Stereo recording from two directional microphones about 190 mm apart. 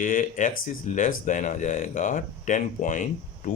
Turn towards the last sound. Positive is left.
turn(degrees=40)  # may be behind; listen again after turning